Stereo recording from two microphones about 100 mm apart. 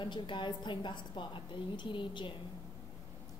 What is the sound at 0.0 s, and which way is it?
A woman's voice, 55° left (ahead or behind).